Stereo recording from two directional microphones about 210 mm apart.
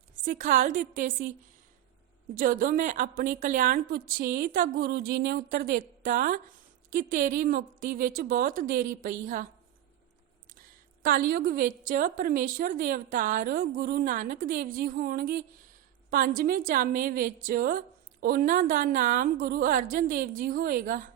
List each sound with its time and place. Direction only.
0.2 s a woman's voice: 40° right (ahead or behind)
2.3 s a woman's voice: 40° right (ahead or behind)
11.0 s a woman's voice: 45° right (ahead or behind)